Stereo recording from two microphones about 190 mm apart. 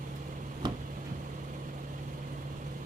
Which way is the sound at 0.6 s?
20° right (ahead or behind).